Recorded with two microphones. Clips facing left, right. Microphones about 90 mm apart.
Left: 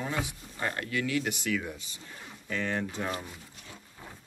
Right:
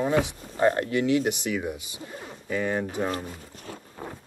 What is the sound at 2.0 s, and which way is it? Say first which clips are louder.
Speech: right 8 dB; 45° right (ahead or behind).